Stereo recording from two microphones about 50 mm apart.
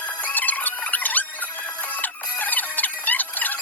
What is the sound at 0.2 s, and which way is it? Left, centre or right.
Music, left.